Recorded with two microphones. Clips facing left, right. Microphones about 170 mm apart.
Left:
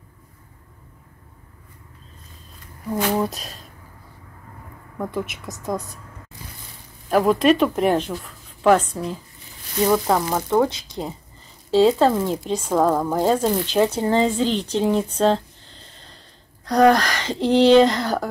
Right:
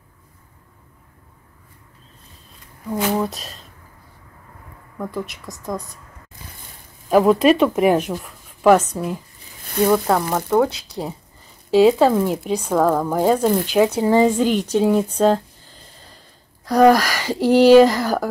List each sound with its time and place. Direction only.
2.9 s speech: centre (ahead or behind)
5.1 s speech: centre (ahead or behind)
7.1 s speech: 5° right (ahead or behind)
16.6 s speech: 5° right (ahead or behind)